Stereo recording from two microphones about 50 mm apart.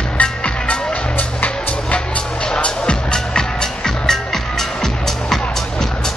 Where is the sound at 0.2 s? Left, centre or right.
Left.